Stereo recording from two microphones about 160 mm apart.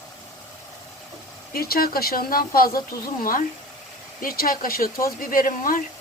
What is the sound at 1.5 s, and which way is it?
Speech, 70° left (ahead or behind).